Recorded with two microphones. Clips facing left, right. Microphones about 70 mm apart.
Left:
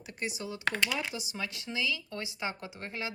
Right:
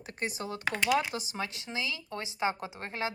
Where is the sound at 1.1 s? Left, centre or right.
Right.